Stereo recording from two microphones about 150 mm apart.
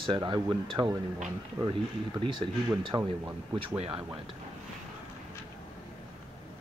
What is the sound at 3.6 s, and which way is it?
Speech, 40° right (ahead or behind).